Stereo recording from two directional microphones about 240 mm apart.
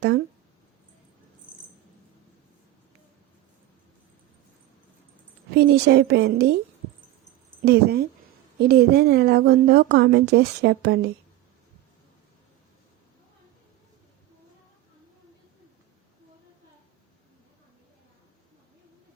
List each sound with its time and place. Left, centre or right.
5.5 s a woman's voice: right
7.6 s a woman's voice: right